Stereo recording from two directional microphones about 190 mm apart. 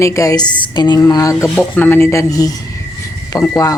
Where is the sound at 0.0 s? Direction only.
15° left (ahead or behind).